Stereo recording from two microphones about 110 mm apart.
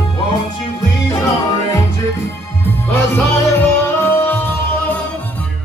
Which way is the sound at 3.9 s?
20° left (ahead or behind).